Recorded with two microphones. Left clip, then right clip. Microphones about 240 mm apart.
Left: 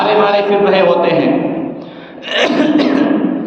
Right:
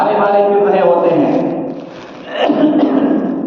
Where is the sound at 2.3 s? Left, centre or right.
Left.